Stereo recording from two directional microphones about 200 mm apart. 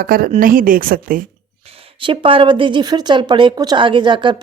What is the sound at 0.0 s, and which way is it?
Speech, 45° right (ahead or behind).